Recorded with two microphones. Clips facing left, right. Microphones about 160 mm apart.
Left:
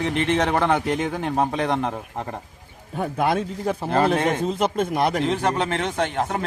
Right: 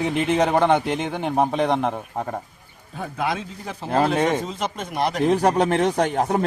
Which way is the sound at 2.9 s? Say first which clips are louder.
Left 4 dB; 50° left (ahead or behind).